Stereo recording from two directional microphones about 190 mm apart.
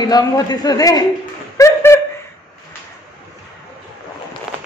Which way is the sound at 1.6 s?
15° left (ahead or behind).